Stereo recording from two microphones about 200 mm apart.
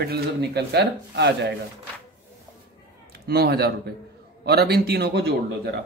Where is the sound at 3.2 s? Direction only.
50° right (ahead or behind).